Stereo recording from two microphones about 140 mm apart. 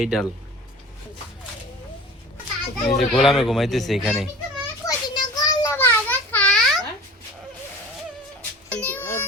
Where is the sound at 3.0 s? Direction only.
Centre (ahead or behind).